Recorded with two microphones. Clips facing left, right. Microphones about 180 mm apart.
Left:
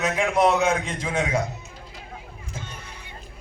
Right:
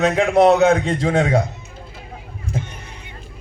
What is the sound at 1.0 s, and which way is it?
Speech, 65° right (ahead or behind).